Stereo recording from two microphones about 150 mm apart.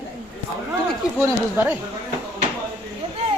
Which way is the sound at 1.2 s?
15° right (ahead or behind).